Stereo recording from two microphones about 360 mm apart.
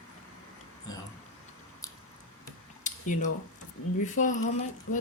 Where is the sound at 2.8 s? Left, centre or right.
Left.